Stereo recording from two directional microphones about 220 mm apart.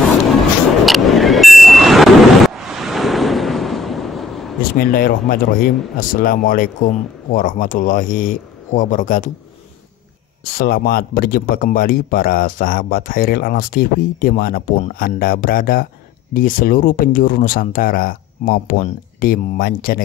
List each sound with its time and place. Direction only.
0.8 s vehicle: centre (ahead or behind)
4.7 s speech: 40° left (ahead or behind)
10.4 s speech: 40° left (ahead or behind)